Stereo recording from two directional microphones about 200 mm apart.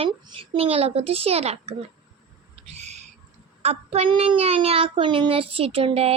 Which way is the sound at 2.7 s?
35° right (ahead or behind).